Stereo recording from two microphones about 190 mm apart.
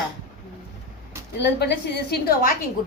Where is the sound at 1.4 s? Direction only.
60° left (ahead or behind).